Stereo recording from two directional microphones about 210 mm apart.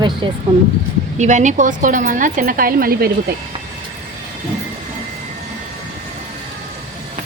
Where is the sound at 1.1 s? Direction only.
35° right (ahead or behind).